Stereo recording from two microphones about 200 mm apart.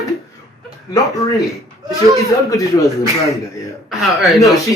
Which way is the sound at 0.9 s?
15° left (ahead or behind).